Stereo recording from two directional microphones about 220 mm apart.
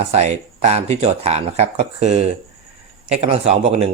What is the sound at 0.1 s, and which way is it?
Speech, 30° right (ahead or behind).